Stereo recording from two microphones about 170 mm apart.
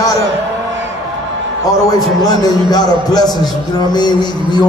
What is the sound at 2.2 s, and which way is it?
A man's voice, 20° left (ahead or behind).